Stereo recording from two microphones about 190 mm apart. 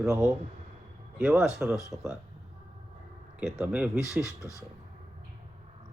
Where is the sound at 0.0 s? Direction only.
15° right (ahead or behind).